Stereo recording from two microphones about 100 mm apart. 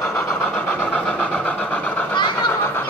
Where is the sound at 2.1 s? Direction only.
50° left (ahead or behind).